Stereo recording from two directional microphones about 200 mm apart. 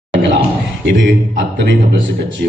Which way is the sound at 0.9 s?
50° right (ahead or behind).